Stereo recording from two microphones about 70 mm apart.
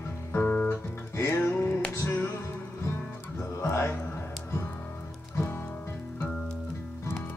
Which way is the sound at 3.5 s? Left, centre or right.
Left.